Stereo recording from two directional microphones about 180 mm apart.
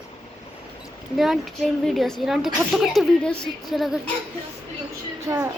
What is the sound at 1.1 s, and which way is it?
A woman's voice, centre (ahead or behind).